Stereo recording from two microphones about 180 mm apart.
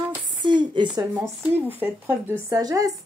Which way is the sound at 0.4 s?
25° right (ahead or behind).